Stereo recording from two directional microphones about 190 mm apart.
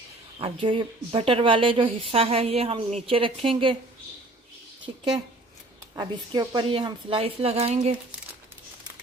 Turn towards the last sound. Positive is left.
turn(degrees=-35)  # may be behind; listen again after turning